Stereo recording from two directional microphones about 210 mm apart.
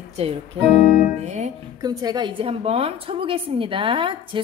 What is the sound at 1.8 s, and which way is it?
A woman's voice, 20° right (ahead or behind).